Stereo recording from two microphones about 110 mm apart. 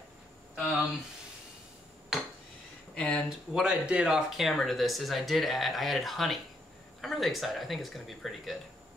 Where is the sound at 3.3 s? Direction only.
5° right (ahead or behind).